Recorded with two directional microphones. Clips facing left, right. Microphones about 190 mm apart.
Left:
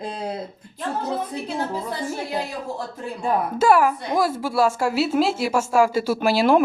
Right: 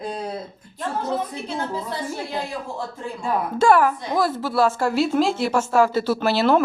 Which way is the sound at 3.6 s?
10° left (ahead or behind).